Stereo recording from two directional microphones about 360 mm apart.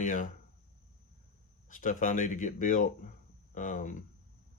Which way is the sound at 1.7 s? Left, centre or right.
Left.